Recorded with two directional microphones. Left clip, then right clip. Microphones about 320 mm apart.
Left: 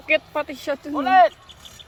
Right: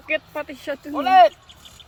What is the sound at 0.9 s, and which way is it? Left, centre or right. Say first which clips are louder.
Speech: right 2 dB; right.